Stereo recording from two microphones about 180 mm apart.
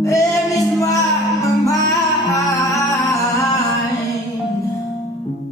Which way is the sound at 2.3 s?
20° left (ahead or behind).